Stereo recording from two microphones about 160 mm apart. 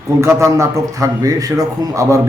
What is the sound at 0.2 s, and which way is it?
A man's voice, 20° right (ahead or behind).